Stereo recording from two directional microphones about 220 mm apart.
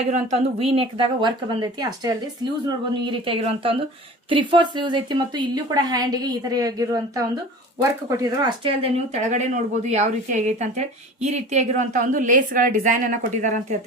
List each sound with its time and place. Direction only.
0.1 s a woman's voice: 30° right (ahead or behind)